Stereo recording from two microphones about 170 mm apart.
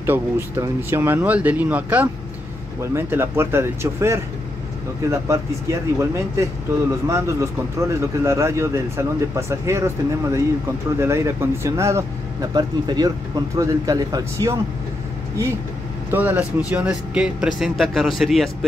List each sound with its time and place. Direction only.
0.0 s speech: 15° right (ahead or behind)
11.0 s speech: 15° right (ahead or behind)
16.1 s speech: 10° right (ahead or behind)